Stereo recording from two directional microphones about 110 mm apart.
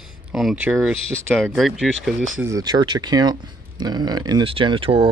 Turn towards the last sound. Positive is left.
turn(degrees=-55)  # may be behind; listen again after turning